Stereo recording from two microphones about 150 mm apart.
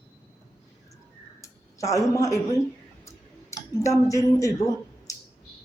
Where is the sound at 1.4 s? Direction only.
20° left (ahead or behind).